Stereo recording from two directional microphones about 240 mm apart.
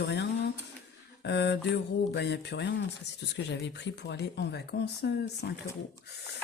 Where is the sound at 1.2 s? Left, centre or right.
Left.